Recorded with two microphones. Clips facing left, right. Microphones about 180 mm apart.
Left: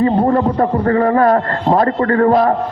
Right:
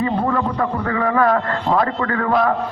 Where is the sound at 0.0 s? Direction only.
40° left (ahead or behind).